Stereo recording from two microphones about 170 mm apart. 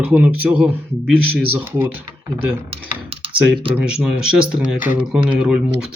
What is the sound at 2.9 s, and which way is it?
Computer keyboard, 35° right (ahead or behind).